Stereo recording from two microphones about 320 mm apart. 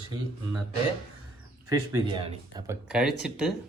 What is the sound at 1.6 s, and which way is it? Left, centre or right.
Speech, centre.